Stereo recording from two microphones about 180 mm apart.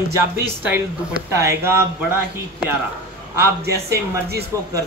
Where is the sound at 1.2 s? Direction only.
15° right (ahead or behind).